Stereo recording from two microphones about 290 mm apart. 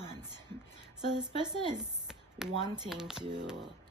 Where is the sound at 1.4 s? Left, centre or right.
Centre.